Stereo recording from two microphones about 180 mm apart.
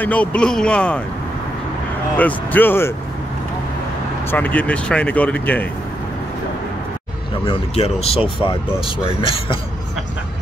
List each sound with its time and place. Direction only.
0.0 s speech: 5° left (ahead or behind)
2.1 s speech: 10° left (ahead or behind)
4.3 s speech: 10° left (ahead or behind)
7.4 s speech: 35° left (ahead or behind)